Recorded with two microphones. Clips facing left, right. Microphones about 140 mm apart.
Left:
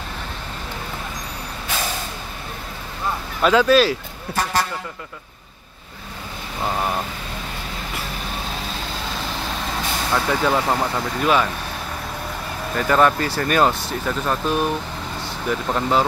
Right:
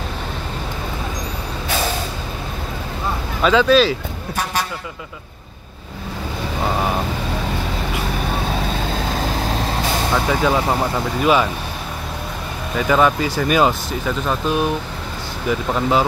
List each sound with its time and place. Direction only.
3.4 s speech: 5° left (ahead or behind)
9.1 s vehicle: 45° right (ahead or behind)
10.1 s speech: 5° right (ahead or behind)
12.7 s speech: 5° right (ahead or behind)
15.7 s speech: 5° right (ahead or behind)